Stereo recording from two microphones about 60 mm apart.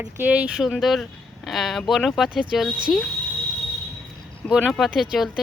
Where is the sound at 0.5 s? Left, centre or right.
Centre.